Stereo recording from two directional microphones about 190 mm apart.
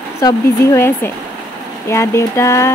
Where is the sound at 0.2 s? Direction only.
15° left (ahead or behind).